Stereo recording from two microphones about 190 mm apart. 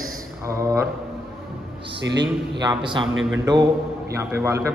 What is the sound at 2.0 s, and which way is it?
Speech, 65° right (ahead or behind).